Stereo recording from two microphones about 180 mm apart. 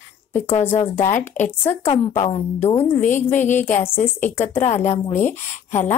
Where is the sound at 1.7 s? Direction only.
35° left (ahead or behind).